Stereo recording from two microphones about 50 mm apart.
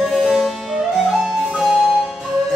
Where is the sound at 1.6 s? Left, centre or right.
Centre.